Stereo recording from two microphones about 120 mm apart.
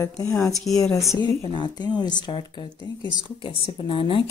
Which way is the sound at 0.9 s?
30° left (ahead or behind).